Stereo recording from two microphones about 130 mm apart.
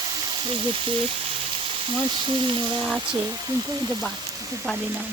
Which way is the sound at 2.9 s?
15° right (ahead or behind).